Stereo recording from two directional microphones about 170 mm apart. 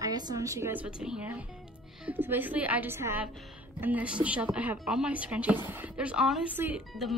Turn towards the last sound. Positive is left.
turn(degrees=0)  # may be behind; listen again after turning